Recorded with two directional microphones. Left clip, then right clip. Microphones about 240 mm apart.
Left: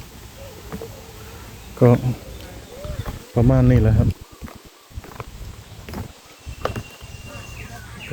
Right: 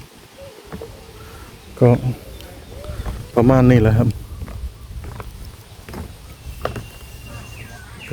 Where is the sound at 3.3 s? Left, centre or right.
Right.